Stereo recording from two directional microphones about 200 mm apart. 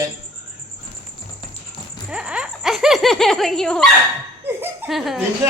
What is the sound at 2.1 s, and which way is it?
Speech, 5° right (ahead or behind).